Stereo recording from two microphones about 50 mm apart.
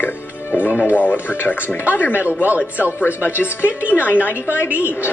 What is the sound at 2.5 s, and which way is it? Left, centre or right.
Speech, left.